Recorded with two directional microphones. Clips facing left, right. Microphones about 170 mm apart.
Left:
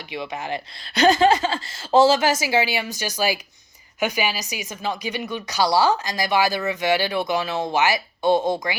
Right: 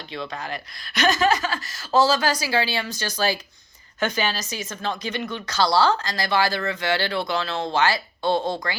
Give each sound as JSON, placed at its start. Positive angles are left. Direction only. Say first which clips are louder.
{"t": 0.1, "sound": "speech", "louder": "left 3 dB", "side_deg": 20}